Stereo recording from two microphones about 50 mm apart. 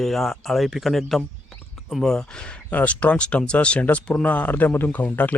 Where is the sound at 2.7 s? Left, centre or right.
Left.